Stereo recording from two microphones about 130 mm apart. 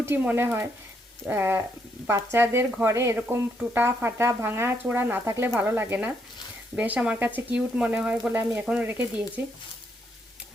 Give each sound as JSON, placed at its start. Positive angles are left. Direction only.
{"t": 0.0, "sound": "speech", "side_deg": -15}